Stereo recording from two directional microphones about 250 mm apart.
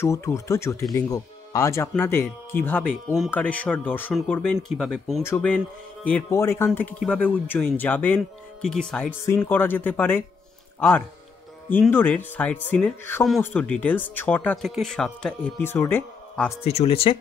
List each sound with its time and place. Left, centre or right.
0.0 s speech: centre
16.6 s speech: left